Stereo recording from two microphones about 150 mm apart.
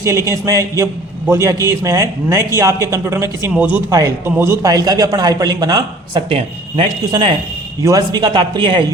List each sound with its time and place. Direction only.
0.0 s speech: 20° right (ahead or behind)
3.8 s speech: 20° right (ahead or behind)
7.8 s a man's voice: 25° right (ahead or behind)